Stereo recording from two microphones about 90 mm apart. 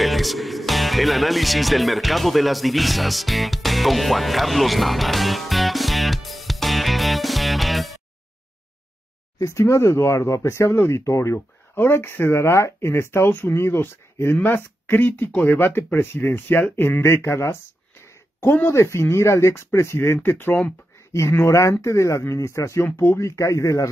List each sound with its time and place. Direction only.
0.0 s music: centre (ahead or behind)
9.4 s speech: 35° left (ahead or behind)